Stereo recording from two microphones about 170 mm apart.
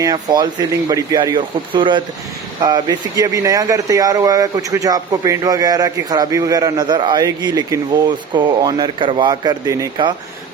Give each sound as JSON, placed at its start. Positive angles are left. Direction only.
{"t": 0.0, "sound": "speech", "side_deg": -25}